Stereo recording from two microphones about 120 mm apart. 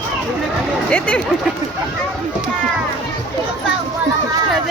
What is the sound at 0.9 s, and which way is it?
Speech, 10° left (ahead or behind).